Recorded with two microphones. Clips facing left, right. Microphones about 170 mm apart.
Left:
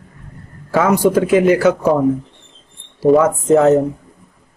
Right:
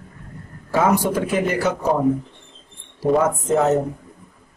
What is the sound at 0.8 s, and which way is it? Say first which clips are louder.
A man's voice: left 5 dB; 90° left.